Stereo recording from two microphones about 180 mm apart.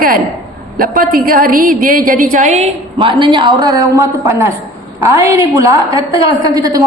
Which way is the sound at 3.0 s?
25° right (ahead or behind).